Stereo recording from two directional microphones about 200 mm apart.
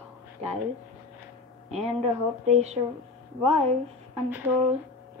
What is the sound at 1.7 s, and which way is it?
A woman's voice, 30° right (ahead or behind).